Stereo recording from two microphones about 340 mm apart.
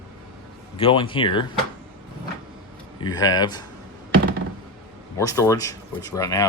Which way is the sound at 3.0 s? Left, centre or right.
Centre.